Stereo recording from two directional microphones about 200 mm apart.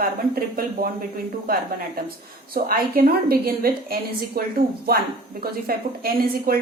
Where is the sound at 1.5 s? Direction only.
45° right (ahead or behind).